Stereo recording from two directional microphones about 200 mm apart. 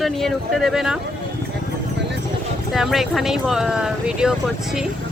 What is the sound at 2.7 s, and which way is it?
Speech, centre (ahead or behind).